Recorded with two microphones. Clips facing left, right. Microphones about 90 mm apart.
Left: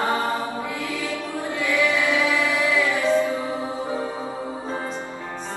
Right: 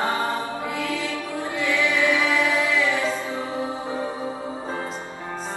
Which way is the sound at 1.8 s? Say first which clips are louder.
Even; 20° right (ahead or behind).